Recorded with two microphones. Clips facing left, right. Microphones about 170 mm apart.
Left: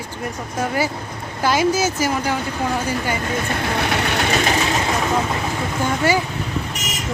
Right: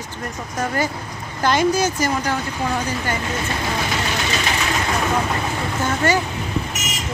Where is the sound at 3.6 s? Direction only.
60° left (ahead or behind).